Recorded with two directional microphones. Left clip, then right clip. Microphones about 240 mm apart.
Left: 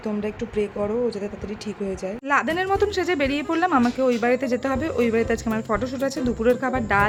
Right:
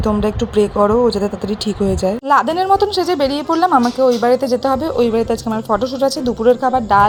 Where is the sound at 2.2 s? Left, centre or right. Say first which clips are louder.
Right 7 dB; centre.